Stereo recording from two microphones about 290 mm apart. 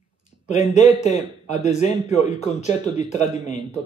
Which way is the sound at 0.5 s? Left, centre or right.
Left.